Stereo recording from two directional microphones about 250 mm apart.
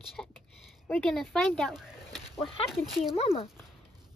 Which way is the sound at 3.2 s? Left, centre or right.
Left.